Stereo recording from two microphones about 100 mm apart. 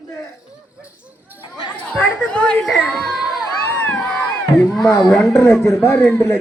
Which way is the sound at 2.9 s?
Centre (ahead or behind).